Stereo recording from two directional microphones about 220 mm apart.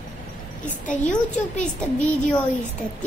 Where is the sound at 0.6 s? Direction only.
35° left (ahead or behind).